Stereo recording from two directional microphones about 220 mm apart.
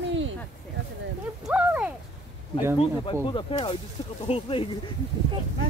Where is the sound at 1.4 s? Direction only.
5° right (ahead or behind).